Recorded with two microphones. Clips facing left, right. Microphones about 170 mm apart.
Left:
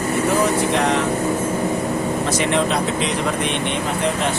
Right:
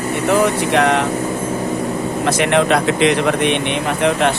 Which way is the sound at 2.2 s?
65° right (ahead or behind).